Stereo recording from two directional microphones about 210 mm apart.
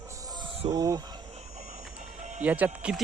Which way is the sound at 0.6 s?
20° right (ahead or behind).